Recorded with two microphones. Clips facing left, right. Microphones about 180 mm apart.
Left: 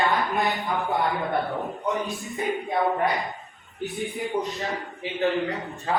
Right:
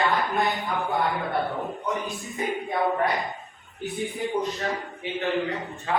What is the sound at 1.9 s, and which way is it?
Speech, centre (ahead or behind).